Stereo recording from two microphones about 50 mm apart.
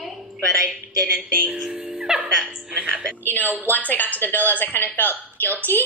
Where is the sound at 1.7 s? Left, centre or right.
Centre.